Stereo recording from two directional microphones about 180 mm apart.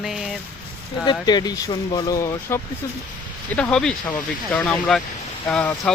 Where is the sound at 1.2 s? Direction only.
20° left (ahead or behind).